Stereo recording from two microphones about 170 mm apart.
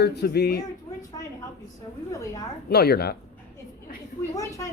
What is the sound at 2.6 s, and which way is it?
Speech, 65° left (ahead or behind).